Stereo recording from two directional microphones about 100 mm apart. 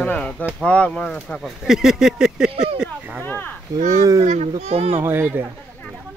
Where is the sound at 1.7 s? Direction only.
5° right (ahead or behind).